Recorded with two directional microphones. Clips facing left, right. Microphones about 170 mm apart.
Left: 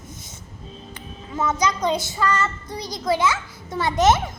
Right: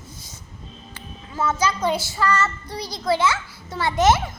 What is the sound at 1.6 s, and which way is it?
A child's voice, 20° left (ahead or behind).